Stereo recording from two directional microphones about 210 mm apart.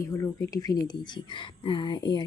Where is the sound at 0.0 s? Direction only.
15° left (ahead or behind).